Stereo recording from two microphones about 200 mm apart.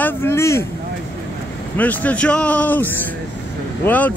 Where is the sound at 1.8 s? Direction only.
10° left (ahead or behind).